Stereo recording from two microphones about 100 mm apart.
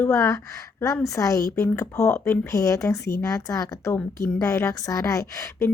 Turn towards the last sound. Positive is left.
turn(degrees=35)  # may be behind; listen again after turning